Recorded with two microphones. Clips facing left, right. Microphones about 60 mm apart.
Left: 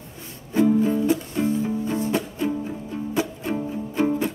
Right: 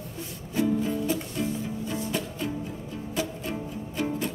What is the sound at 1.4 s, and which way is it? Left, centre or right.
Music, left.